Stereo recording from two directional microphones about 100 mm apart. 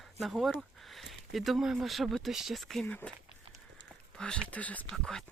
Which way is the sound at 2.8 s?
15° left (ahead or behind).